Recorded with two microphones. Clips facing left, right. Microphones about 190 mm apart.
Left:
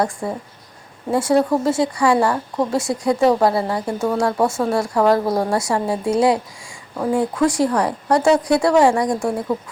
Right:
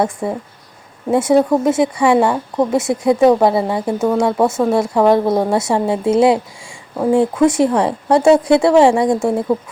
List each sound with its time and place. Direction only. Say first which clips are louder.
0.0 s speech: right 3 dB; 25° right (ahead or behind)